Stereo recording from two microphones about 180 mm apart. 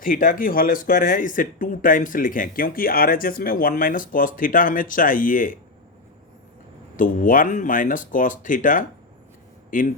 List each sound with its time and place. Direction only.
0.0 s speech: 50° left (ahead or behind)
6.9 s speech: 50° left (ahead or behind)